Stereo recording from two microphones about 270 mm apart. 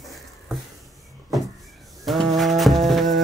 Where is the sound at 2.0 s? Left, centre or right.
Centre.